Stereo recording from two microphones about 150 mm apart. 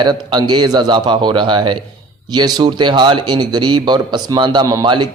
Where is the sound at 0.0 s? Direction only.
30° right (ahead or behind).